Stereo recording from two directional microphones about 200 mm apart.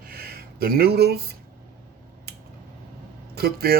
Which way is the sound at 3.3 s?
50° right (ahead or behind).